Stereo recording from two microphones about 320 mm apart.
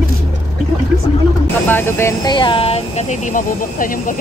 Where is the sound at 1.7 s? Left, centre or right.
Centre.